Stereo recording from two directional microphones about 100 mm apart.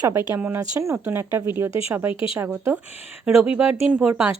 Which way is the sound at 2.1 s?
60° left (ahead or behind).